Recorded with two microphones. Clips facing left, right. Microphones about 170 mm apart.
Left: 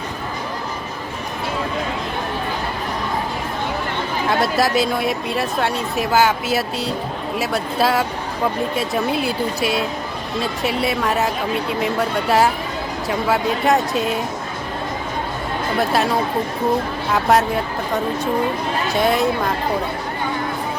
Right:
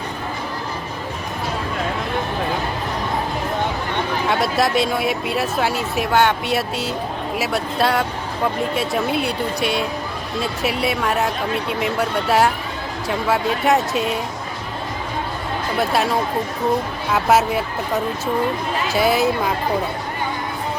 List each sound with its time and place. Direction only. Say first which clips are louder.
4.3 s speech: left 2 dB; centre (ahead or behind)
15.8 s speech: even; centre (ahead or behind)
18.9 s speech: right 1 dB; 5° right (ahead or behind)